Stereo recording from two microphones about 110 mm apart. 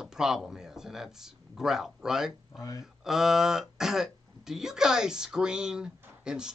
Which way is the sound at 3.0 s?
5° right (ahead or behind).